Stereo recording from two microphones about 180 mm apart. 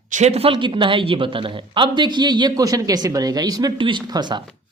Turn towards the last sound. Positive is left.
turn(degrees=-25)  # may be behind; listen again after turning